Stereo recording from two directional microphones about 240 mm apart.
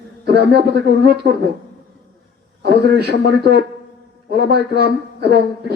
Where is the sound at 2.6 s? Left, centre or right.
Right.